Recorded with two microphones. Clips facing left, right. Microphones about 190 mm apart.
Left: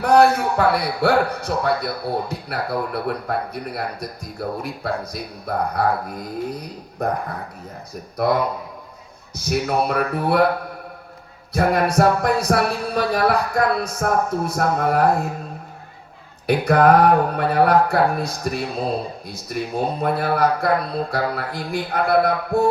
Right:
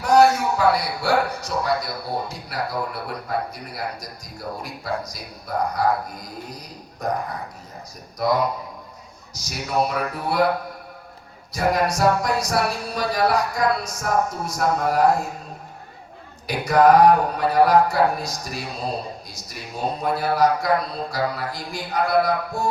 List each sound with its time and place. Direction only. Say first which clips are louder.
0.0 s speech: left 1 dB; 55° left (ahead or behind)
8.1 s speech: left 2 dB; 60° left (ahead or behind)
11.5 s speech: left 3 dB; 55° left (ahead or behind)
16.5 s speech: left 1 dB; 55° left (ahead or behind)